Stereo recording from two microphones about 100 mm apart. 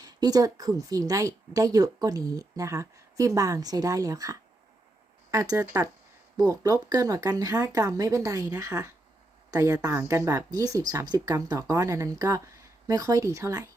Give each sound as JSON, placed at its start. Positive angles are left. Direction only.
{"t": 0.0, "sound": "speech", "side_deg": -40}